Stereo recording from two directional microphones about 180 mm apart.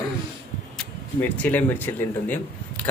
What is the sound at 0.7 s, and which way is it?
Speech, 10° left (ahead or behind).